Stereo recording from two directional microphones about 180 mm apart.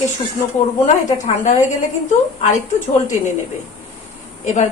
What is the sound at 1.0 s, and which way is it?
A woman's voice, 40° left (ahead or behind).